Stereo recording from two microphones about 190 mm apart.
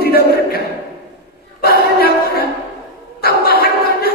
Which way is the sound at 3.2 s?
55° left (ahead or behind).